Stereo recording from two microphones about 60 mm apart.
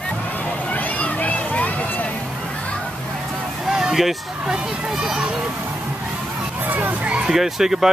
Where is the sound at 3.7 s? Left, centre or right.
Centre.